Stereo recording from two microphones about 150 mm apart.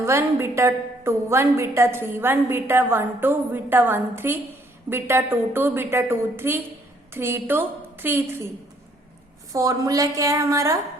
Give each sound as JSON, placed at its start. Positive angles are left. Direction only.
{"t": 0.0, "sound": "a woman's voice", "side_deg": -15}
{"t": 9.5, "sound": "a woman's voice", "side_deg": -20}